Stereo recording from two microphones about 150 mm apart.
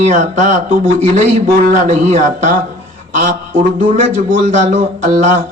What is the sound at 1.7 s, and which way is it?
Speech, 55° right (ahead or behind).